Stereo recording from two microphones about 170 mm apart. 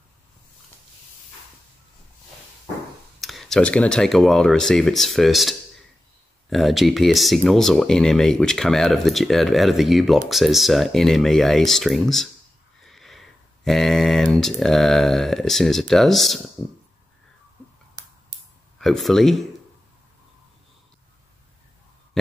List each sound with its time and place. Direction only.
3.2 s speech: centre (ahead or behind)
18.8 s speech: centre (ahead or behind)
22.2 s heart murmur: centre (ahead or behind)